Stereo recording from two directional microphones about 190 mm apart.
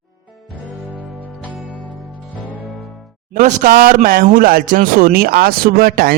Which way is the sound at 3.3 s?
45° right (ahead or behind).